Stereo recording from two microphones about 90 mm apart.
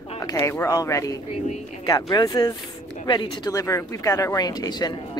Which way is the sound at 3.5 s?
35° left (ahead or behind).